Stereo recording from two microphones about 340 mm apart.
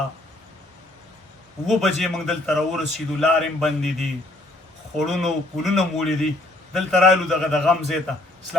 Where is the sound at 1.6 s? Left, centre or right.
Centre.